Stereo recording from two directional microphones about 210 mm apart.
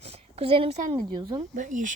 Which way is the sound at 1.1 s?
20° right (ahead or behind).